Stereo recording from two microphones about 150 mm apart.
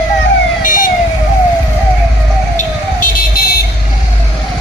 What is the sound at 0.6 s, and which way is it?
Emergency vehicle, 65° left (ahead or behind).